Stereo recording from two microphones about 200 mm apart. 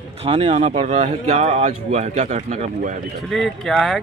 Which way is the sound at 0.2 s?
30° right (ahead or behind).